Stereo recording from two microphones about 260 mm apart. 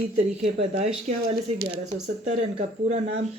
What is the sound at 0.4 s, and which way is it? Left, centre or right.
Speech, right.